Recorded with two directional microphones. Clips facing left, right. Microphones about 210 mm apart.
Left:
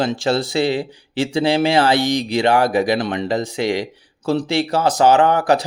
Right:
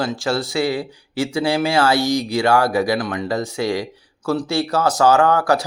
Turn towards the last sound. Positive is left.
turn(degrees=20)  # may be behind; listen again after turning